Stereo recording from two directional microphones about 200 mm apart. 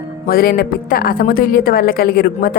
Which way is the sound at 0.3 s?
50° left (ahead or behind).